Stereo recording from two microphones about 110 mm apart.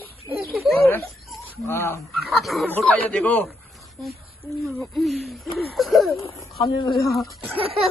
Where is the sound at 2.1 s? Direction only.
Centre (ahead or behind).